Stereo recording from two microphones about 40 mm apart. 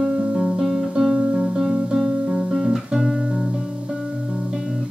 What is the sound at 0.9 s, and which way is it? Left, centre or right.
Music, centre.